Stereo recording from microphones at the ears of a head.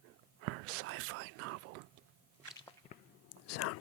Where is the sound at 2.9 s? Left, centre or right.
Left.